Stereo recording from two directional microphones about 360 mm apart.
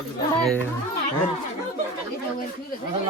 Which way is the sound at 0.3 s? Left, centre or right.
Centre.